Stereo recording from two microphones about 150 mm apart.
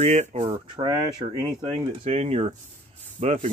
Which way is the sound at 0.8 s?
30° right (ahead or behind).